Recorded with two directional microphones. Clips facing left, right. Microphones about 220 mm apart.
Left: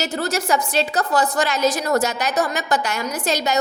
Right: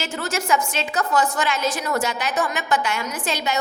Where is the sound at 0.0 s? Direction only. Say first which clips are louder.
Left 4 dB; 35° left (ahead or behind).